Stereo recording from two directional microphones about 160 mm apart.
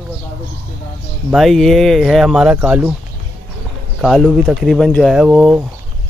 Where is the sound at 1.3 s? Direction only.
Centre (ahead or behind).